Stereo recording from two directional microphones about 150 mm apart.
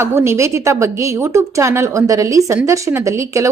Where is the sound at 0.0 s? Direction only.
15° right (ahead or behind).